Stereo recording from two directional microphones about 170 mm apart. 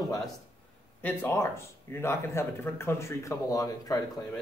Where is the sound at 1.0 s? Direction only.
10° left (ahead or behind).